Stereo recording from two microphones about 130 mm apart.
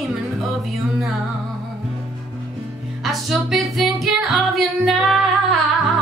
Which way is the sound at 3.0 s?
Centre (ahead or behind).